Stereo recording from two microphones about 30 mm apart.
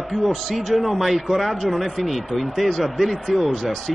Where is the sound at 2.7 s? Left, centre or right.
Centre.